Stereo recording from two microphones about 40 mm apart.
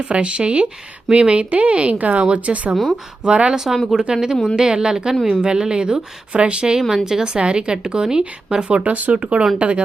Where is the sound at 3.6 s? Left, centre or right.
Centre.